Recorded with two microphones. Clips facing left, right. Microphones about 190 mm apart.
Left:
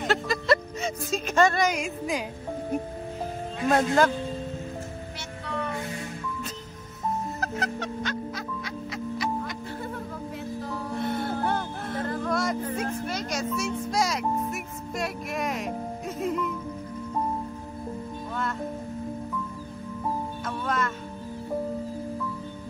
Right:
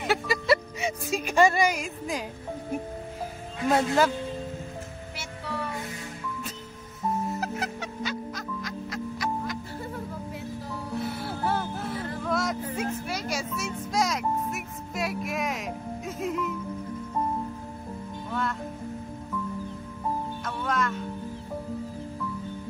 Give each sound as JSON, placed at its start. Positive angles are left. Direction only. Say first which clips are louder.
{"t": 0.0, "sound": "a sound", "louder": "even", "side_deg": -10}
{"t": 1.8, "sound": "speech", "louder": "left 3 dB", "side_deg": 0}
{"t": 3.6, "sound": "speech", "louder": "left 1 dB", "side_deg": -10}
{"t": 7.3, "sound": "music", "louder": "left 1 dB", "side_deg": -10}
{"t": 11.0, "sound": "music", "louder": "left 4 dB", "side_deg": -5}
{"t": 20.4, "sound": "speech", "louder": "even", "side_deg": 0}